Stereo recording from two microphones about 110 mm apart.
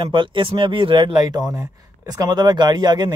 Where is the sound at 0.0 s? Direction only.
50° right (ahead or behind).